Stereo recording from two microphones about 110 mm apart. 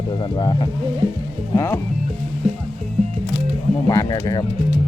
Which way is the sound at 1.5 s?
30° left (ahead or behind).